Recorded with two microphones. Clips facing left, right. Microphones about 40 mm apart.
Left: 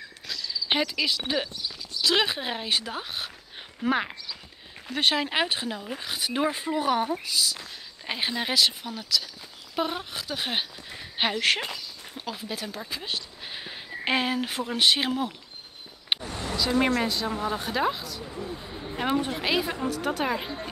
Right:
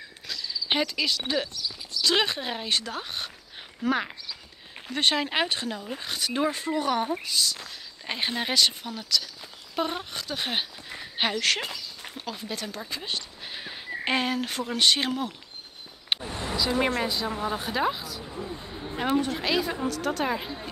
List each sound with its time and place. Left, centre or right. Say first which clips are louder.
0.3 s cricket: even; centre
0.7 s speech: even; centre
4.8 s speech: even; centre
11.4 s speech: left 1 dB; centre
12.2 s speech: left 1 dB; centre
16.2 s vehicle: even; centre
16.5 s speech: left 2 dB; centre
19.4 s speech: even; centre